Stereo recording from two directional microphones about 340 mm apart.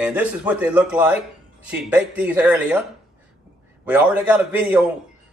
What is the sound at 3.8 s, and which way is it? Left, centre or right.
Speech, centre.